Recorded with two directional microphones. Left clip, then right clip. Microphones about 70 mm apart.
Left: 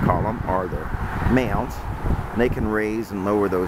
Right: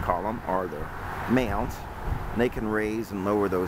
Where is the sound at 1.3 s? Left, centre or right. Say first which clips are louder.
Left 4 dB; centre.